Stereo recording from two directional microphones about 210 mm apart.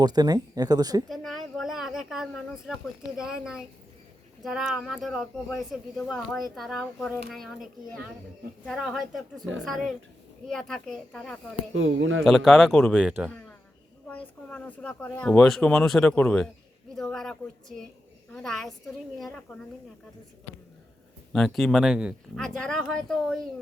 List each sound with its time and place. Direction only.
0.0 s speech: 20° right (ahead or behind)
1.0 s a sound: centre (ahead or behind)
3.2 s speech: 5° right (ahead or behind)
11.7 s speech: 65° right (ahead or behind)
12.2 s speech: centre (ahead or behind)
14.1 s a woman's voice: 5° left (ahead or behind)
21.3 s speech: centre (ahead or behind)